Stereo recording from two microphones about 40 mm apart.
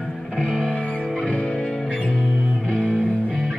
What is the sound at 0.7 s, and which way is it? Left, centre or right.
Music, left.